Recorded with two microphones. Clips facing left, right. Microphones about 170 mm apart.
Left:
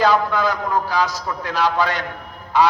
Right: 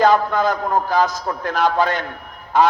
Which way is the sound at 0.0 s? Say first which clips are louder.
Right 2 dB; 50° right (ahead or behind).